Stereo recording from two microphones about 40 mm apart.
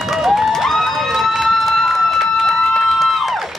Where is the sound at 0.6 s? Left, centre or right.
Centre.